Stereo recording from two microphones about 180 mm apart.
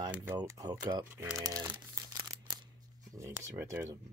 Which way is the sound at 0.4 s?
20° right (ahead or behind).